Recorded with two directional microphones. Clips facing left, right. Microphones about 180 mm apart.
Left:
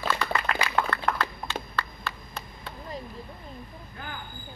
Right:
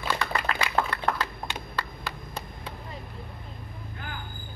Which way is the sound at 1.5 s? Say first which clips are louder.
Left 1 dB; 15° right (ahead or behind).